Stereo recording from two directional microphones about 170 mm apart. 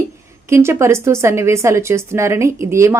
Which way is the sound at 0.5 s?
15° right (ahead or behind).